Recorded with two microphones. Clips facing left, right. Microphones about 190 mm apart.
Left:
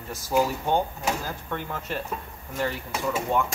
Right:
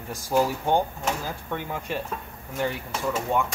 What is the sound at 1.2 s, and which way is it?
Speech, 15° right (ahead or behind).